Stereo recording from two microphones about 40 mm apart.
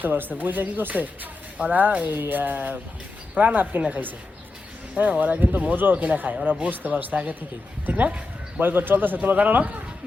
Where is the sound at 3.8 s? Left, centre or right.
Right.